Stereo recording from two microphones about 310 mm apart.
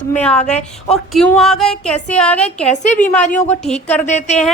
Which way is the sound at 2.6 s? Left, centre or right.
Left.